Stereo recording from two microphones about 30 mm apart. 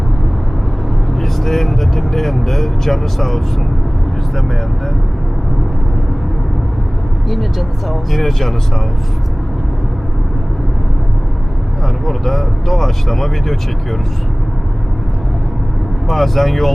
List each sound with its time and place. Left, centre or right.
1.1 s speech: centre
7.9 s speech: centre
12.0 s speech: centre
16.0 s speech: centre